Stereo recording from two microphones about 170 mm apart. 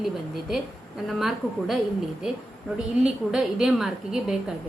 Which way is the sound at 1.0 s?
Centre (ahead or behind).